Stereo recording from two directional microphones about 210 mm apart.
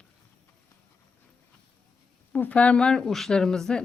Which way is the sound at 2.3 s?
5° left (ahead or behind).